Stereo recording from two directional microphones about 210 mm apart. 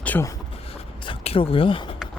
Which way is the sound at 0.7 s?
25° left (ahead or behind).